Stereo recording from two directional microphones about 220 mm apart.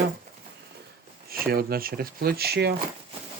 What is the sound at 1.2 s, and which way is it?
Speech, 45° right (ahead or behind).